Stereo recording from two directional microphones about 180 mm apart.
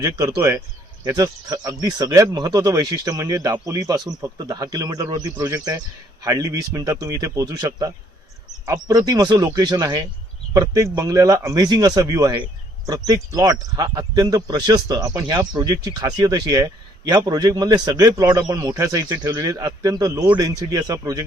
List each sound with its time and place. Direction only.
0.0 s speech: 20° right (ahead or behind)